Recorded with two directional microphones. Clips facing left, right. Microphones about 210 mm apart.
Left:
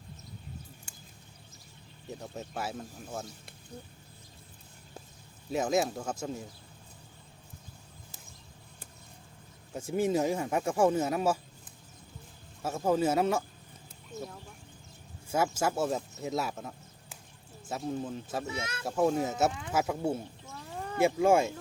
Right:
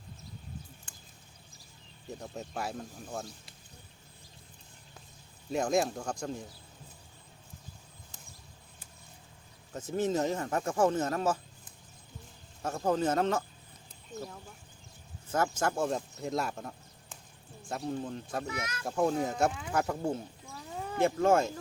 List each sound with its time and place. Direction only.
2.0 s speech: centre (ahead or behind)
5.5 s speech: 5° left (ahead or behind)
9.7 s speech: 10° left (ahead or behind)
12.6 s speech: 5° left (ahead or behind)
18.4 s speech: 25° left (ahead or behind)
18.9 s speech: 5° left (ahead or behind)
20.4 s cat: 5° right (ahead or behind)
21.0 s speech: 10° left (ahead or behind)